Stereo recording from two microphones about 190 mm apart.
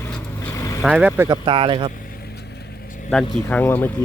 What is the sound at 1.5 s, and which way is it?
Speech, 25° right (ahead or behind).